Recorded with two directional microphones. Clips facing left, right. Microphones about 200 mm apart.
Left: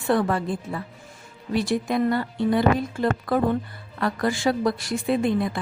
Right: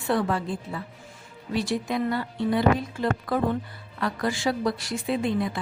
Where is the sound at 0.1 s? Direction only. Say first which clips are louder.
Left 3 dB; 50° left (ahead or behind).